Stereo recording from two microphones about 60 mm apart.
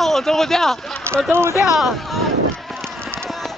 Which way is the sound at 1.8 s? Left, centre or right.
Centre.